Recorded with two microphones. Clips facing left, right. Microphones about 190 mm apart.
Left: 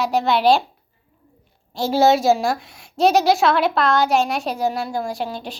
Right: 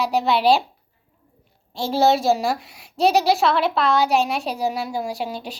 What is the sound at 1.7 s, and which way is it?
A woman's voice, centre (ahead or behind).